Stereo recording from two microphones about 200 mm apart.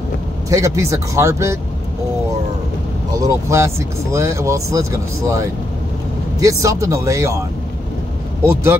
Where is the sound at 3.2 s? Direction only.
15° right (ahead or behind).